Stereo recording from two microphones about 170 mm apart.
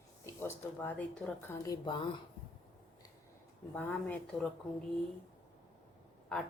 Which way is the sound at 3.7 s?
5° left (ahead or behind).